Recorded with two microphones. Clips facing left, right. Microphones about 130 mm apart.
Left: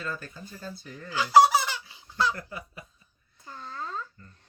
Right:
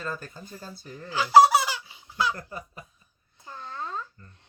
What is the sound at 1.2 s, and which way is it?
Fowl, 10° right (ahead or behind).